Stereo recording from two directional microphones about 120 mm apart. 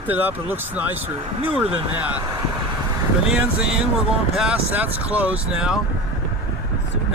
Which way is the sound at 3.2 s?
10° right (ahead or behind).